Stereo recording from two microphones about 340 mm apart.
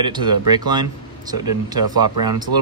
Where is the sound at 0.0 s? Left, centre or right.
Centre.